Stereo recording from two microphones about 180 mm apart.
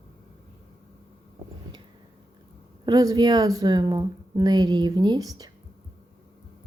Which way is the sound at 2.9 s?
20° right (ahead or behind).